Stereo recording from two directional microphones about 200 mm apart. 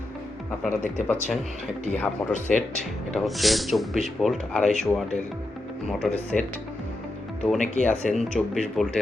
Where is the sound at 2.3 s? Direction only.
40° left (ahead or behind).